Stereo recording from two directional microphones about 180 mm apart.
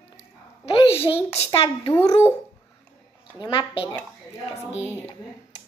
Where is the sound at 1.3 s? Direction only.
30° left (ahead or behind).